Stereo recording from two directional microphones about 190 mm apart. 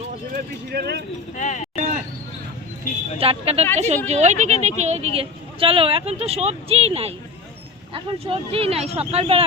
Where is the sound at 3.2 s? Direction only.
30° right (ahead or behind).